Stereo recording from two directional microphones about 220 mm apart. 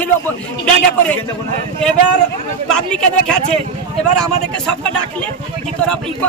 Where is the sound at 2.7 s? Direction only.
5° left (ahead or behind).